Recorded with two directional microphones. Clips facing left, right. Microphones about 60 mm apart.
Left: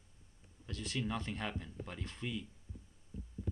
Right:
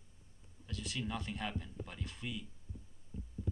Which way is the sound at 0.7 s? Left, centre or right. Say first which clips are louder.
Left 2 dB; centre.